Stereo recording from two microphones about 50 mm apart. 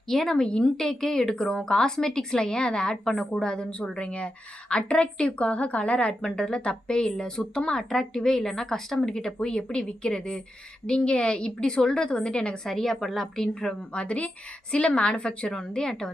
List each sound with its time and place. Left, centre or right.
0.1 s a woman's voice: centre
12.6 s a woman's voice: centre